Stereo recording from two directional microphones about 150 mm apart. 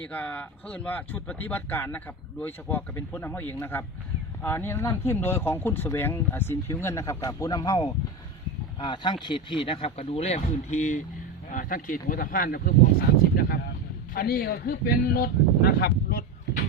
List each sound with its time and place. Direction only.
0.0 s speech: 10° left (ahead or behind); by 11.0 s 50° left (ahead or behind)
11.5 s speech: 65° left (ahead or behind); by 12.7 s 80° left
14.1 s a man's voice: 75° left (ahead or behind)